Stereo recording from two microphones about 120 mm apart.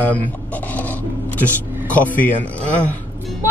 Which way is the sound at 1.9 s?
15° left (ahead or behind).